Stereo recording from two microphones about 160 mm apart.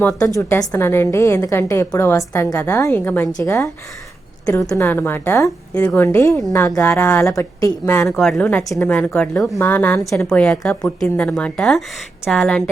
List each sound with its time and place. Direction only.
0.0 s a woman's voice: 5° left (ahead or behind)
0.3 s a woman's voice: 15° left (ahead or behind)
6.1 s a woman's voice: 20° left (ahead or behind)
8.0 s a woman's voice: centre (ahead or behind)